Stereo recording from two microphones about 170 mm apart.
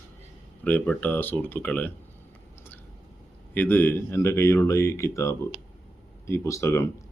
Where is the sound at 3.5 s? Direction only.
10° left (ahead or behind).